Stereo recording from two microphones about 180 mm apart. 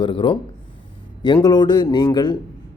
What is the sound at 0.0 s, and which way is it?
Speech, 30° left (ahead or behind).